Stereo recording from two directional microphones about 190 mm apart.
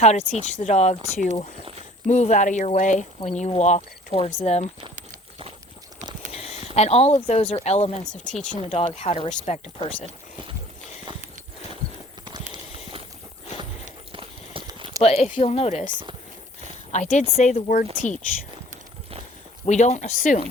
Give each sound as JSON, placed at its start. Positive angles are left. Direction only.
{"t": 0.0, "sound": "speech", "side_deg": 35}
{"t": 2.0, "sound": "speech", "side_deg": 40}
{"t": 6.3, "sound": "a sound", "side_deg": 30}
{"t": 6.7, "sound": "speech", "side_deg": 35}
{"t": 8.2, "sound": "speech", "side_deg": 5}
{"t": 8.6, "sound": "speech", "side_deg": 30}
{"t": 14.1, "sound": "clip-clop", "side_deg": -25}
{"t": 15.0, "sound": "speech", "side_deg": 35}
{"t": 16.9, "sound": "speech", "side_deg": 40}
{"t": 19.6, "sound": "speech", "side_deg": 40}